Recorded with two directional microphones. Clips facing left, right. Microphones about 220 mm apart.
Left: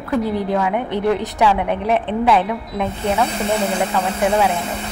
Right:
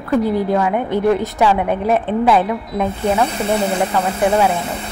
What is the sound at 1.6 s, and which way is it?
Speech, 45° right (ahead or behind).